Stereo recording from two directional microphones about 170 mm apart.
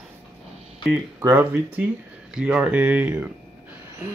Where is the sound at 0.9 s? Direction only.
15° right (ahead or behind).